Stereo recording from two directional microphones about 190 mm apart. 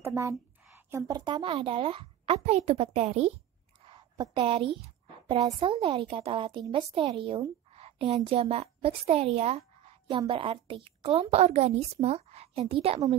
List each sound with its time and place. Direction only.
0.0 s a woman's voice: 15° right (ahead or behind); by 3.3 s 35° right (ahead or behind)
3.8 s a sound: 25° right (ahead or behind)
5.3 s speech: 25° right (ahead or behind)